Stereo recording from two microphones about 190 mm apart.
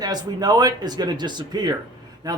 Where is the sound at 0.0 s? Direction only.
20° right (ahead or behind).